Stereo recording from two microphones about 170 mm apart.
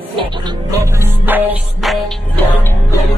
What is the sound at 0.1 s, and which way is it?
Music, 25° right (ahead or behind).